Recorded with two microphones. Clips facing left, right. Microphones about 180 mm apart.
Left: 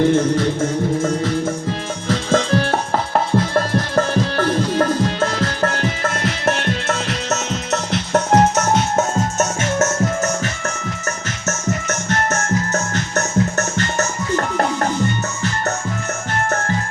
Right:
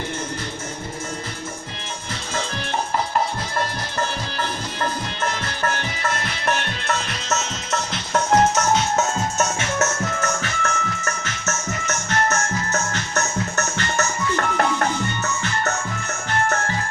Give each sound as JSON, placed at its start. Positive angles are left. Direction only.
{"t": 2.0, "sound": "music", "side_deg": 90}
{"t": 7.3, "sound": "music", "side_deg": 60}
{"t": 10.2, "sound": "music", "side_deg": 40}
{"t": 11.9, "sound": "music", "side_deg": 45}